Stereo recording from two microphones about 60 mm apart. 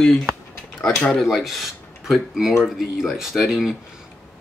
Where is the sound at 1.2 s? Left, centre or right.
Centre.